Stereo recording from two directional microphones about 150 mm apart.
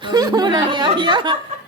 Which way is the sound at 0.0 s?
25° right (ahead or behind).